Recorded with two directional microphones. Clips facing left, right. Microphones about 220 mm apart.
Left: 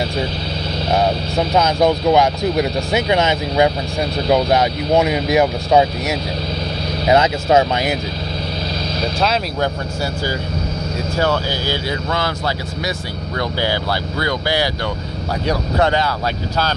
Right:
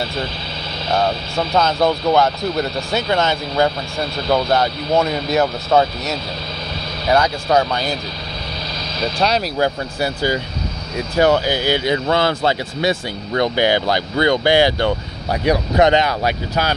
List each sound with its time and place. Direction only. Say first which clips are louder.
0.9 s speech: left 1 dB; 15° left (ahead or behind)
9.2 s speech: right 2 dB; centre (ahead or behind)
11.1 s speech: right 5 dB; 15° right (ahead or behind)